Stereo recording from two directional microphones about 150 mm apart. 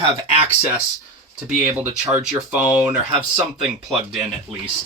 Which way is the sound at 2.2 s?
5° right (ahead or behind).